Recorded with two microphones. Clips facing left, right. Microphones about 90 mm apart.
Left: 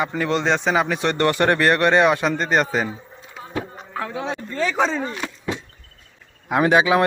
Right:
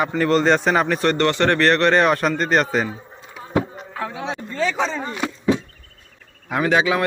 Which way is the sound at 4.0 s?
5° right (ahead or behind).